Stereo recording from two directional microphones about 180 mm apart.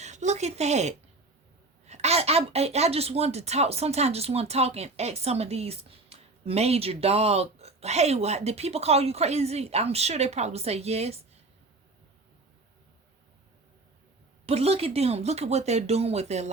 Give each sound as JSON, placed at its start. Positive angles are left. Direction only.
{"t": 0.0, "sound": "a woman's voice", "side_deg": -40}
{"t": 14.4, "sound": "a woman's voice", "side_deg": -35}